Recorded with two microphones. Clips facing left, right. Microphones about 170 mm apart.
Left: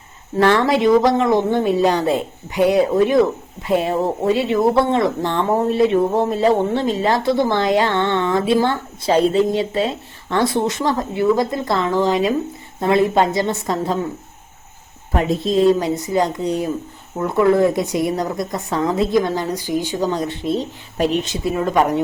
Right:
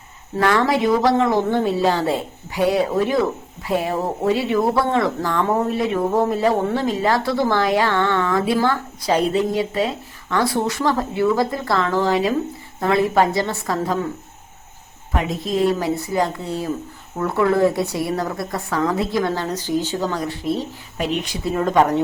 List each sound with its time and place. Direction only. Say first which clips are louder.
0.3 s speech: left 3 dB; 25° left (ahead or behind)
15.1 s speech: left 5 dB; 30° left (ahead or behind)
21.0 s speech: left 4 dB; 35° left (ahead or behind)
21.5 s speech: right 1 dB; 5° left (ahead or behind)